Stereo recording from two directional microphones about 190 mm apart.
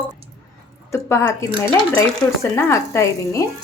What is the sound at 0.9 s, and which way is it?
Speech, 15° left (ahead or behind).